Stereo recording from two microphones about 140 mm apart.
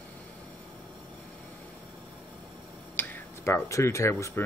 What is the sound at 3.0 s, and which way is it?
Speech, 15° left (ahead or behind).